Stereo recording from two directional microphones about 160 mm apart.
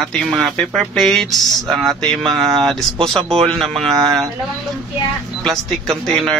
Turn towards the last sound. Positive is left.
turn(degrees=0)  # may be behind; listen again after turning